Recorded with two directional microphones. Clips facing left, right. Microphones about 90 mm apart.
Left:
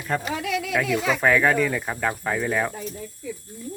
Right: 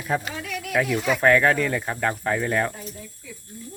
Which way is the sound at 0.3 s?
90° left.